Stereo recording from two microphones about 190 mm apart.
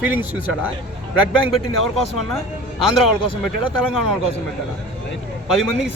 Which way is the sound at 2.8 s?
Centre (ahead or behind).